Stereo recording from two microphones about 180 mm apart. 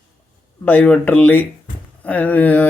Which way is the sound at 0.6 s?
10° left (ahead or behind).